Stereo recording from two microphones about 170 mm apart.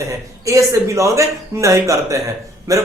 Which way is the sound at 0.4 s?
20° right (ahead or behind).